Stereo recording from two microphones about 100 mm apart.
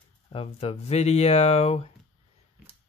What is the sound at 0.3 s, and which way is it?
Speech, 80° left.